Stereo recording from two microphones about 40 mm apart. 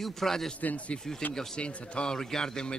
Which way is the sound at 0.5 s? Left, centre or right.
Left.